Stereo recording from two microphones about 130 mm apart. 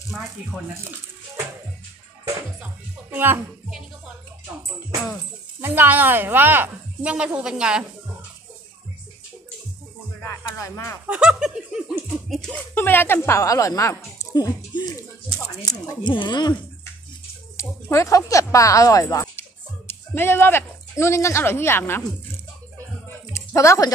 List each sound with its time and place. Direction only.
3.1 s speech: 15° right (ahead or behind)
5.6 s speech: 15° right (ahead or behind)
10.2 s speech: 20° left (ahead or behind)
11.1 s speech: 5° right (ahead or behind)
12.7 s speech: 15° left (ahead or behind); by 16.5 s 35° left (ahead or behind)
17.6 s speech: 20° left (ahead or behind)
23.3 s a sound: 25° left (ahead or behind)